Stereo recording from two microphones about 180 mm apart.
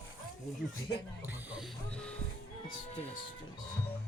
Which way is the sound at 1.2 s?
10° right (ahead or behind).